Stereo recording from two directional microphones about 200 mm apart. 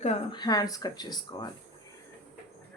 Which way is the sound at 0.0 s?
30° left (ahead or behind).